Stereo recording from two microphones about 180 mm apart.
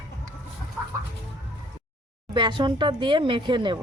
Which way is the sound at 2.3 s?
25° right (ahead or behind).